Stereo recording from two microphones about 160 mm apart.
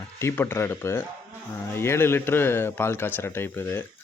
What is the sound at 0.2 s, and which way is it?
Speech, 15° left (ahead or behind).